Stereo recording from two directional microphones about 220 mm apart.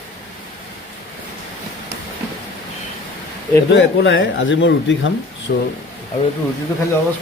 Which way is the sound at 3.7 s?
55° left (ahead or behind).